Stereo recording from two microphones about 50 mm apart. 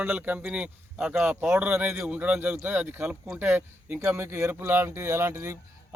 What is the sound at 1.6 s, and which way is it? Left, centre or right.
Speech, right.